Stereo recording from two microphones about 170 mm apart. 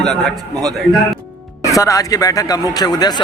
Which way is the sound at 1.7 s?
20° left (ahead or behind).